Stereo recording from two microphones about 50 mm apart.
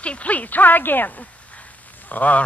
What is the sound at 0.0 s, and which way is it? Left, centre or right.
A man's voice, left.